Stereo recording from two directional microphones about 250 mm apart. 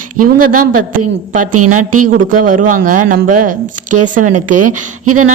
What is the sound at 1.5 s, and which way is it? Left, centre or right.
Speech, right.